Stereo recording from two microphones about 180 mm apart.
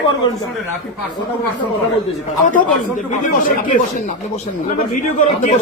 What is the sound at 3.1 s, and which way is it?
Speech, 45° left (ahead or behind).